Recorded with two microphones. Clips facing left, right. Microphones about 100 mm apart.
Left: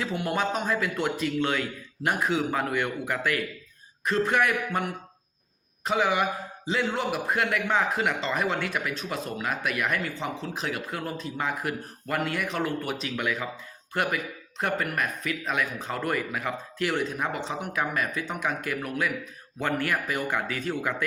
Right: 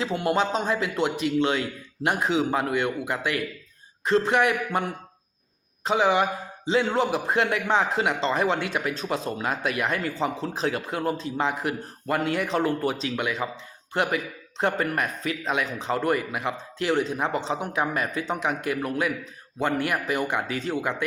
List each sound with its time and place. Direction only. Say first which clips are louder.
0.0 s a man's voice: right 4 dB; 30° right (ahead or behind)